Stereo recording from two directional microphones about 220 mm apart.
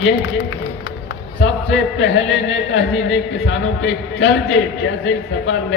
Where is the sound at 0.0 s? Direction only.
55° left (ahead or behind).